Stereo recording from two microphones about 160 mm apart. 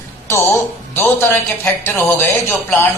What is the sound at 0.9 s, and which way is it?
A man's voice, 15° left (ahead or behind).